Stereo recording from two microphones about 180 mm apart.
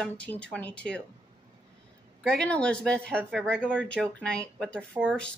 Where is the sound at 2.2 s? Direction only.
5° left (ahead or behind).